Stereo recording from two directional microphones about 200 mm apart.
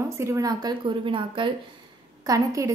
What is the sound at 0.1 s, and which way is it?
A woman's voice, 15° right (ahead or behind).